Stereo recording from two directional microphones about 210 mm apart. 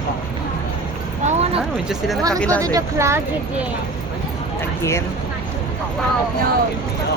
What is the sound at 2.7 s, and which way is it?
Speech, 15° right (ahead or behind).